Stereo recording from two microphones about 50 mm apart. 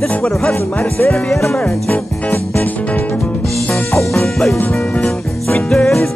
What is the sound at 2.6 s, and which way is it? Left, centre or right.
Music, left.